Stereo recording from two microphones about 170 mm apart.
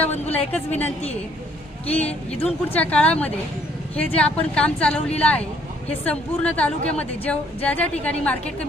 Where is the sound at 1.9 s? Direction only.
10° left (ahead or behind).